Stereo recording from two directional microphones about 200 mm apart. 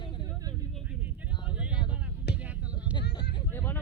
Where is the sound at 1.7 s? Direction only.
25° left (ahead or behind).